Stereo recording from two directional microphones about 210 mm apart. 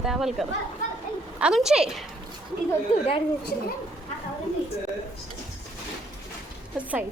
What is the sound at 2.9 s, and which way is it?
Speech, 30° left (ahead or behind).